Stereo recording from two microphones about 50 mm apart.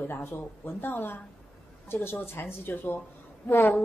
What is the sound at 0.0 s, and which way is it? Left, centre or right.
A woman's voice, left.